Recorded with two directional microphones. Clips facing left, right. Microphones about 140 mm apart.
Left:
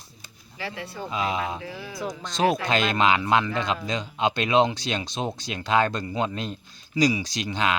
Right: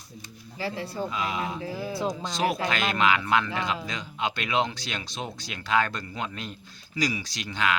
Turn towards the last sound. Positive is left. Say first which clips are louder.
# left 3 dB
turn(degrees=20)  # may be behind; listen again after turning